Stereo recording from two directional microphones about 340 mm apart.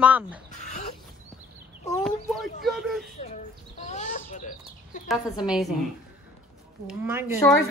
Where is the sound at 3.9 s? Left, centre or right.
Left.